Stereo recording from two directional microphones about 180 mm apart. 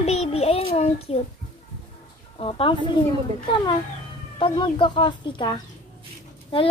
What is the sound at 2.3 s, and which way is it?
Speech, 30° left (ahead or behind).